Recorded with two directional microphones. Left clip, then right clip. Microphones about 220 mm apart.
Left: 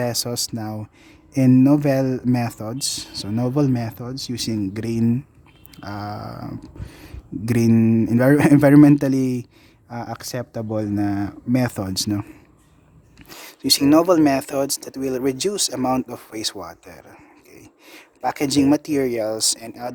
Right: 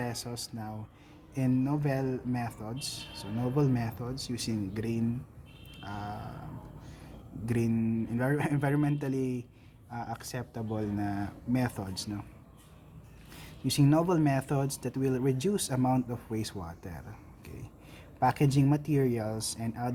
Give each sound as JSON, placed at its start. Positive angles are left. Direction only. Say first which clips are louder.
{"t": 0.0, "sound": "speech", "louder": "left 14 dB", "side_deg": 50}
{"t": 13.3, "sound": "speech", "louder": "left 13 dB", "side_deg": 45}